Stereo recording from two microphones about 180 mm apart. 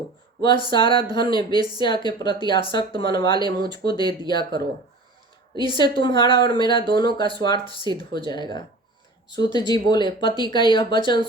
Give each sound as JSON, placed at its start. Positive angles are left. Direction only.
{"t": 0.4, "sound": "a woman's voice", "side_deg": 25}
{"t": 5.7, "sound": "a woman's voice", "side_deg": 25}